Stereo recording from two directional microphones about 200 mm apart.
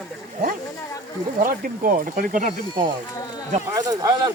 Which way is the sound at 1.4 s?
45° right (ahead or behind).